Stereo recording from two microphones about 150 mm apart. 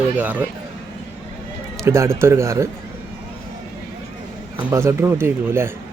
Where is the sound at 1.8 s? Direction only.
15° right (ahead or behind).